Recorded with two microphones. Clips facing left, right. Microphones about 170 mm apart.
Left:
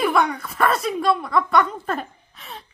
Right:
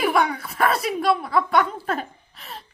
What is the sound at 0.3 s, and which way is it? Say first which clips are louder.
A woman's voice: left 1 dB; 5° right (ahead or behind).